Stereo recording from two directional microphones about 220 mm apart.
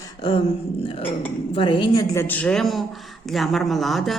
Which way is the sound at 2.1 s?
10° left (ahead or behind).